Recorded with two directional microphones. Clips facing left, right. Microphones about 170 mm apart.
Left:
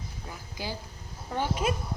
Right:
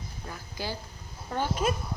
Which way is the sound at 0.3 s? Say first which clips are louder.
Right 1 dB; 15° left (ahead or behind).